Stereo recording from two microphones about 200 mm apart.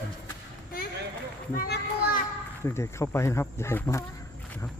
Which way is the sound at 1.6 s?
45° left (ahead or behind).